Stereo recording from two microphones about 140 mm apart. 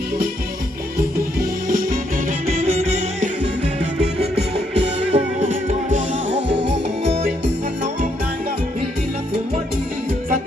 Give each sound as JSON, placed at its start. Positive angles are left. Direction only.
{"t": 0.9, "sound": "music", "side_deg": -85}
{"t": 2.6, "sound": "music", "side_deg": -50}